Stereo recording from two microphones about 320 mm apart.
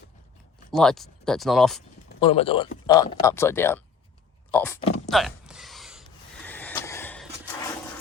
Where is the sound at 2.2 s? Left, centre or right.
Centre.